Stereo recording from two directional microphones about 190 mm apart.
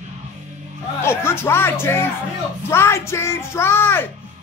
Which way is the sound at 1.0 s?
10° left (ahead or behind).